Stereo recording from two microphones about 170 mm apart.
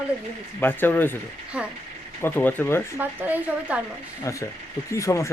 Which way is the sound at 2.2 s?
10° left (ahead or behind).